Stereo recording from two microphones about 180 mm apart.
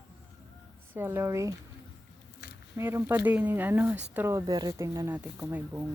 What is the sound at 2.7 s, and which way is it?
Speech, 15° right (ahead or behind).